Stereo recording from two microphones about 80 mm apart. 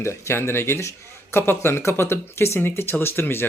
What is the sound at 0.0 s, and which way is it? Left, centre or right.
Speech, left.